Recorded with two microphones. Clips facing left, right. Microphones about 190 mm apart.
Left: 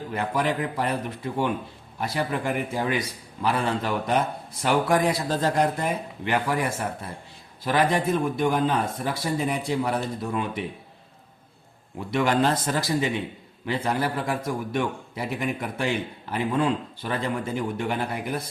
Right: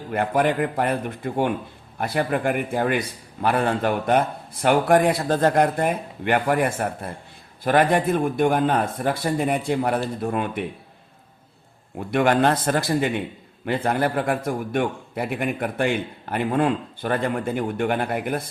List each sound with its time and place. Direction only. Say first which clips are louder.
0.1 s a man's voice: right 5 dB; 55° right (ahead or behind)
11.9 s a man's voice: right 3 dB; 55° right (ahead or behind)